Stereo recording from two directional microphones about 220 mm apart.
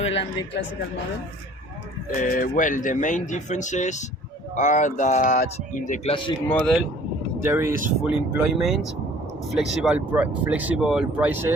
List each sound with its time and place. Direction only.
0.0 s speech: 25° left (ahead or behind)
2.1 s speech: 35° left (ahead or behind)
6.5 s speech: 5° left (ahead or behind)
7.4 s speech: 10° right (ahead or behind)